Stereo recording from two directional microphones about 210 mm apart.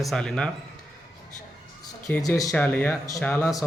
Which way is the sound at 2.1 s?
15° left (ahead or behind).